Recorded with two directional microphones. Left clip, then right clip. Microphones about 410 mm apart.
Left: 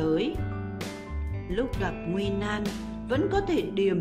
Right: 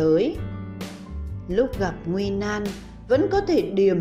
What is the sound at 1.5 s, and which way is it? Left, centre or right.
Speech, centre.